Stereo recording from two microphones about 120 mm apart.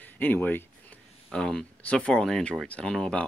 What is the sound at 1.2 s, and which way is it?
Speech, 5° left (ahead or behind).